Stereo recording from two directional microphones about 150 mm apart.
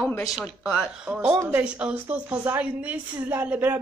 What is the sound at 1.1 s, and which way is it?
A woman's voice, 10° right (ahead or behind).